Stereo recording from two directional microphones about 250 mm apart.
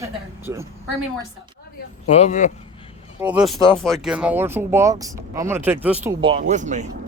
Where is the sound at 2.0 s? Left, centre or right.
Left.